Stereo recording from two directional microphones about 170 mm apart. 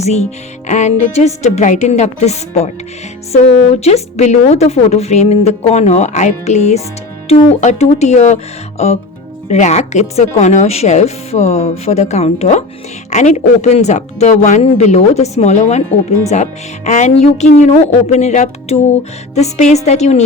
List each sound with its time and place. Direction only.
0.0 s a woman's voice: 40° left (ahead or behind)
3.8 s a woman's voice: 40° left (ahead or behind)